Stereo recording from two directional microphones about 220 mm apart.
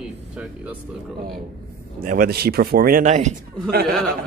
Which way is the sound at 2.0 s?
40° right (ahead or behind).